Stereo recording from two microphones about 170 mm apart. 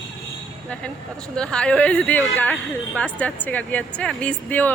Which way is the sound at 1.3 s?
5° left (ahead or behind).